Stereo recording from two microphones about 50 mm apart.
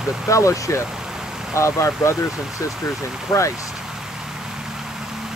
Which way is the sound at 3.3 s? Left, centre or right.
Left.